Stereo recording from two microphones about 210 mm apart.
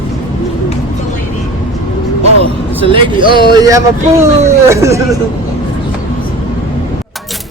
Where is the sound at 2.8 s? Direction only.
25° right (ahead or behind).